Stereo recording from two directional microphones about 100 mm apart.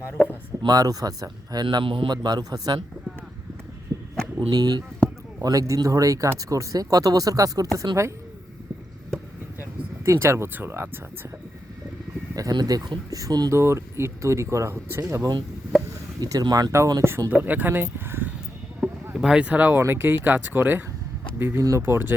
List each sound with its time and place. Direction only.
0.6 s speech: 40° right (ahead or behind)
1.6 s speech: 60° right (ahead or behind); by 2.8 s 40° right (ahead or behind)
3.9 s a sound: 35° right (ahead or behind)
4.4 s speech: 40° right (ahead or behind)
10.1 s speech: 25° right (ahead or behind)
12.3 s speech: 40° right (ahead or behind)
13.5 s speech: 30° right (ahead or behind)
16.2 s speech: 40° right (ahead or behind); by 18.3 s 20° right (ahead or behind)
19.1 s speech: 10° right (ahead or behind)